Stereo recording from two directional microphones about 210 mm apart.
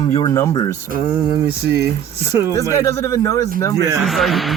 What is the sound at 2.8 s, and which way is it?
Speech, 15° left (ahead or behind).